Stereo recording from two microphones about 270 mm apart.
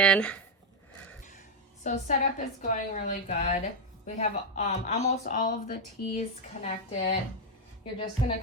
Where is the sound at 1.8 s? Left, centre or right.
Left.